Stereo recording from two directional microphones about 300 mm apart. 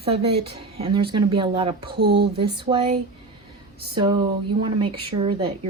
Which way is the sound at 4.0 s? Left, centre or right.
Centre.